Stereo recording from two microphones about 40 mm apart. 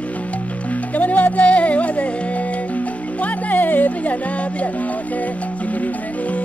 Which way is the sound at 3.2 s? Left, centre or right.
Left.